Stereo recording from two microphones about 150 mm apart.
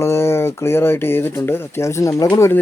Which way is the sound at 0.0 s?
15° left (ahead or behind).